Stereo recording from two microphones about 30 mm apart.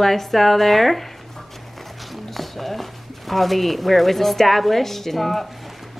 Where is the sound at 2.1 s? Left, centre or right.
Centre.